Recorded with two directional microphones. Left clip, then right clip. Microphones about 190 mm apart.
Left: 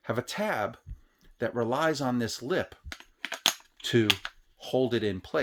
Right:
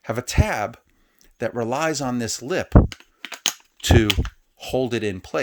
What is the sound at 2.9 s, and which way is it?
Computer keyboard, 10° right (ahead or behind).